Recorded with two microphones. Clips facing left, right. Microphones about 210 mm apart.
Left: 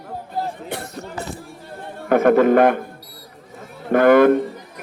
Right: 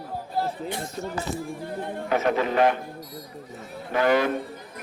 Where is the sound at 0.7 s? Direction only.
65° left (ahead or behind).